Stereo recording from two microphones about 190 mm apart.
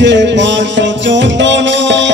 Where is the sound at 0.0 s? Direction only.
70° right (ahead or behind).